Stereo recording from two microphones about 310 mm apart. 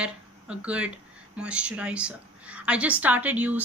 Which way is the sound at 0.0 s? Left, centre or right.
Centre.